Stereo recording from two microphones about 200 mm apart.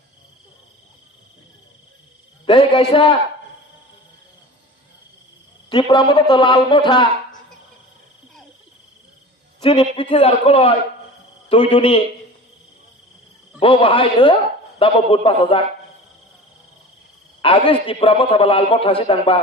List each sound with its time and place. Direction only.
2.5 s a man's voice: 25° left (ahead or behind)
5.6 s a man's voice: 25° left (ahead or behind)
9.6 s a man's voice: 30° left (ahead or behind)
13.6 s a man's voice: 25° left (ahead or behind)
17.4 s a man's voice: 25° left (ahead or behind)